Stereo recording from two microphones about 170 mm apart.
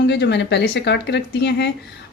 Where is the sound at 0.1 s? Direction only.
90° left.